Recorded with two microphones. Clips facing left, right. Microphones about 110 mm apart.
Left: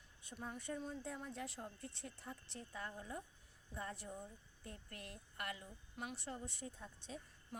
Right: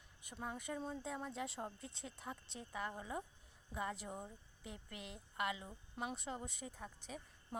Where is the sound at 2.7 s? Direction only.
85° right.